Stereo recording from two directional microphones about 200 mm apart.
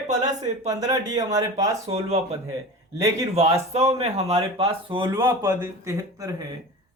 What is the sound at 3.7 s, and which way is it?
Speech, 30° right (ahead or behind).